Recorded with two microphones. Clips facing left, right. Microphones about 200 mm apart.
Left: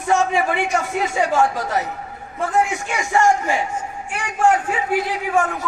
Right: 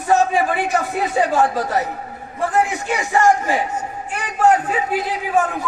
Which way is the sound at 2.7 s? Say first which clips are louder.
Right 3 dB; 35° right (ahead or behind).